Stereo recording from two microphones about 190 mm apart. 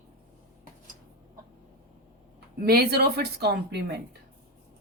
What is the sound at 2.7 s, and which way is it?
Speech, 55° right (ahead or behind).